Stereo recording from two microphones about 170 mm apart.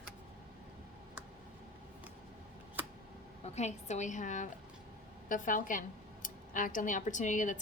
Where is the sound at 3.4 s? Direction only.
40° left (ahead or behind).